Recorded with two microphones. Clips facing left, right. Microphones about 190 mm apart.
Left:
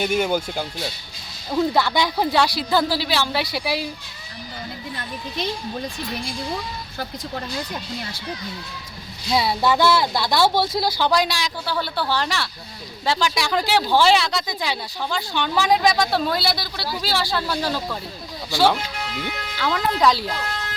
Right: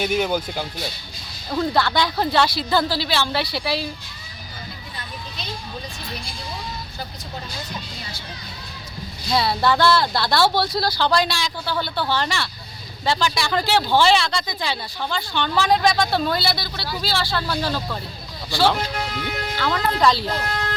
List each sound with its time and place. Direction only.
0.2 s speech: 10° left (ahead or behind)
9.3 s speech: 15° left (ahead or behind)
20.5 s music: 55° right (ahead or behind)